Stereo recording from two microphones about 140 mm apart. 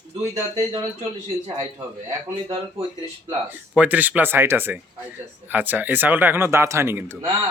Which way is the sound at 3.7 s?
10° right (ahead or behind).